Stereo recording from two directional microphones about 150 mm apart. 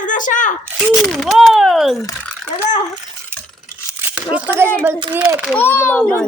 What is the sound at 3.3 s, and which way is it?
Stir, 15° right (ahead or behind).